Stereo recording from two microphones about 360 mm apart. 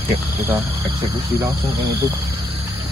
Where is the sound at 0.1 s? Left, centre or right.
Centre.